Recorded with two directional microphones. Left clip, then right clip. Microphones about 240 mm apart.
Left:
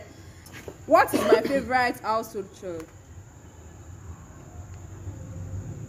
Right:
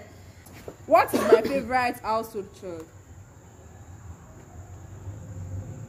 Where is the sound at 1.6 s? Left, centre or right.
Centre.